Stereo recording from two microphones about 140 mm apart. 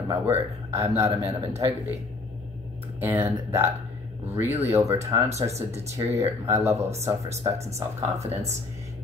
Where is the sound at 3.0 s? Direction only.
15° right (ahead or behind).